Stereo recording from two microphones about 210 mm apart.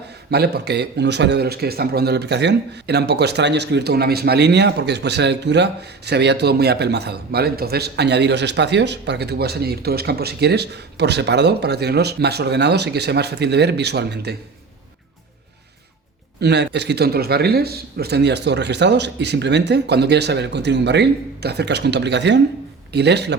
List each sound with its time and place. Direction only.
0.3 s a man's voice: 50° right (ahead or behind)
16.4 s a man's voice: 55° right (ahead or behind)